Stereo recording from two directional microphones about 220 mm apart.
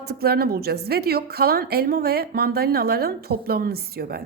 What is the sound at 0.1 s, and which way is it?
A woman's voice, 45° right (ahead or behind).